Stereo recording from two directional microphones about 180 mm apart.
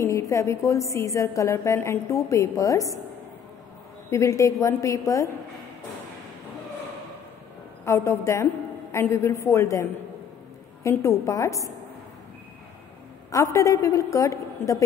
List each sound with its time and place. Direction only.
0.0 s a woman's voice: 15° left (ahead or behind)
4.1 s a woman's voice: 15° left (ahead or behind)
7.8 s a woman's voice: 15° left (ahead or behind)
13.3 s a woman's voice: 15° left (ahead or behind)